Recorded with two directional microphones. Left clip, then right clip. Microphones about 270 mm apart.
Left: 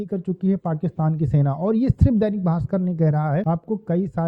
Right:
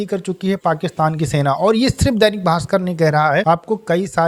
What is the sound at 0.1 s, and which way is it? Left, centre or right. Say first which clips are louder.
Speech: right 5 dB; centre.